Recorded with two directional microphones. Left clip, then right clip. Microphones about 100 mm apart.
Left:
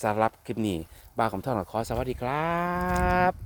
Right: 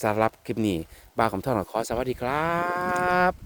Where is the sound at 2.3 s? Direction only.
85° right.